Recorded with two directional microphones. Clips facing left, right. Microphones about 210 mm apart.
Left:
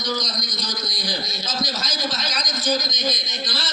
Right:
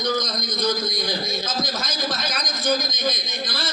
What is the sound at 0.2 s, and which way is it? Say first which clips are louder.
Speech: right 5 dB; 55° right (ahead or behind).